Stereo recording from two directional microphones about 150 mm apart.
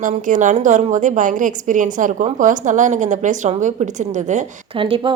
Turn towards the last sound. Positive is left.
turn(degrees=-35)  # may be behind; listen again after turning